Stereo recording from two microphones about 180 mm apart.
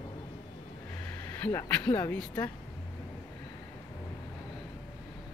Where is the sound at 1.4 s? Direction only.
15° left (ahead or behind).